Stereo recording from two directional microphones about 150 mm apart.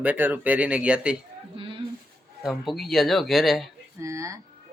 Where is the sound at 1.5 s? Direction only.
35° right (ahead or behind).